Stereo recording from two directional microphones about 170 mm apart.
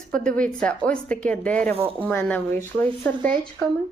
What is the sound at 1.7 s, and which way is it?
Speech, 35° right (ahead or behind).